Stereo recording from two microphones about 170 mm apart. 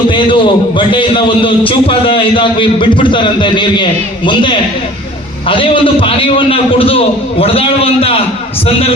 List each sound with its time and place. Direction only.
0.1 s a man's voice: 30° left (ahead or behind)